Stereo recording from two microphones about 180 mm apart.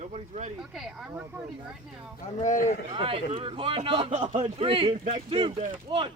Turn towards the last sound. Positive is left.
turn(degrees=-25)  # may be behind; listen again after turning